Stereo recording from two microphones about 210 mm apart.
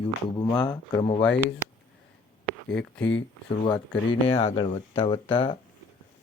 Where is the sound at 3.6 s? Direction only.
25° left (ahead or behind).